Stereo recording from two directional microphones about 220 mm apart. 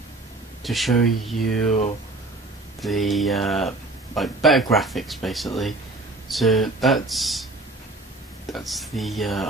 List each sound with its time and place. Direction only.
0.7 s speech: centre (ahead or behind)
1.7 s speech: 30° left (ahead or behind)
2.8 s speech: centre (ahead or behind)
8.5 s speech: centre (ahead or behind)